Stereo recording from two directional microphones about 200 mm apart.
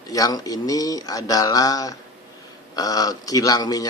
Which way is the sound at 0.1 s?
20° left (ahead or behind).